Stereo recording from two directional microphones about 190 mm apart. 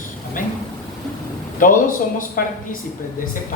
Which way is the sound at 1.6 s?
45° left (ahead or behind).